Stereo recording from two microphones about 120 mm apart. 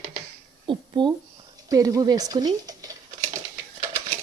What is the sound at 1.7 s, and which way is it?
Speech, 30° right (ahead or behind).